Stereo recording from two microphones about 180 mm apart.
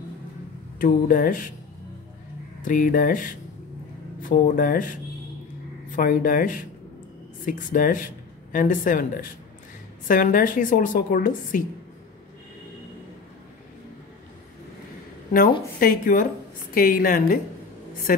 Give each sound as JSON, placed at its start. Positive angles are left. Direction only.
{"t": 0.7, "sound": "a woman's voice", "side_deg": 50}
{"t": 2.6, "sound": "a woman's voice", "side_deg": 50}
{"t": 15.8, "sound": "a woman's voice", "side_deg": 50}